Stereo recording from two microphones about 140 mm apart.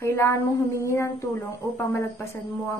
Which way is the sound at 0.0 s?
20° left (ahead or behind).